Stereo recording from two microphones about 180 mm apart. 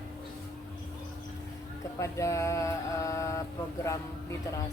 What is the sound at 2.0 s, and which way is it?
Mantra, 15° left (ahead or behind).